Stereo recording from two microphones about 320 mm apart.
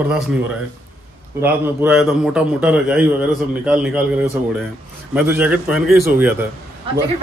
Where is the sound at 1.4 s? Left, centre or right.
Centre.